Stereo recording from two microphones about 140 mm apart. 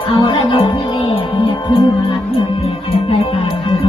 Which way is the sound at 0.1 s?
40° left (ahead or behind).